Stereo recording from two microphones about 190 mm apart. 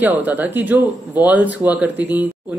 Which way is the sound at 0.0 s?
10° right (ahead or behind).